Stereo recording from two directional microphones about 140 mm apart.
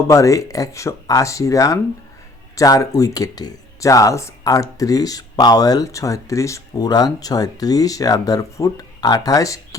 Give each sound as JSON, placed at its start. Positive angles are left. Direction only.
{"t": 0.1, "sound": "speech", "side_deg": 25}